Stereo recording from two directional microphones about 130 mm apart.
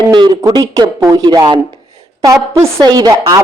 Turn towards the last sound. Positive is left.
turn(degrees=-30)  # may be behind; listen again after turning